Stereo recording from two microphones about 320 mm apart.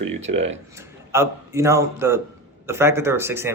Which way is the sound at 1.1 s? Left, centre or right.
Centre.